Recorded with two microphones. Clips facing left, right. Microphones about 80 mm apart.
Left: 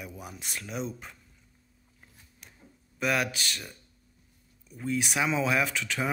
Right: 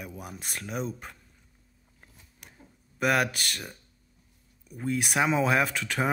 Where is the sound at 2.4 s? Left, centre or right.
Right.